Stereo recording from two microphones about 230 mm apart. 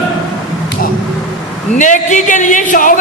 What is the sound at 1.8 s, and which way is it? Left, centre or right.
Speech, left.